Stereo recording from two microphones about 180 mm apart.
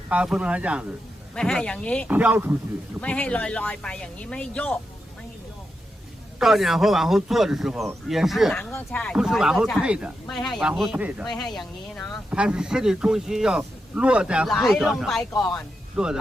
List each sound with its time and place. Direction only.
0.1 s speech: 5° right (ahead or behind)
1.4 s speech: 5° left (ahead or behind)
2.0 s speech: 10° right (ahead or behind)
3.0 s speech: 5° left (ahead or behind)
6.4 s speech: centre (ahead or behind)
9.1 s speech: 5° right (ahead or behind)
15.3 s speech: 20° left (ahead or behind)
15.5 s speech: 5° right (ahead or behind)